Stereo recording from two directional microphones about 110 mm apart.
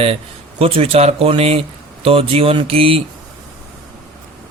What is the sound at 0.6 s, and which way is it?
Speech, 60° right (ahead or behind).